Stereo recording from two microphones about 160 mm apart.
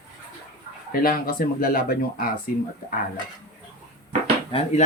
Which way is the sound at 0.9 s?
65° left (ahead or behind).